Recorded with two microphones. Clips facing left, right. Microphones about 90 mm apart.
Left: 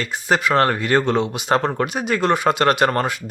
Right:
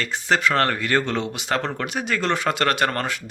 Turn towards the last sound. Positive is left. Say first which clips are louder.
# left 5 dB
turn(degrees=20)  # may be behind; listen again after turning